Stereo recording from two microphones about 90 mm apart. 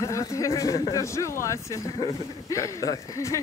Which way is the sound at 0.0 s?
35° left (ahead or behind).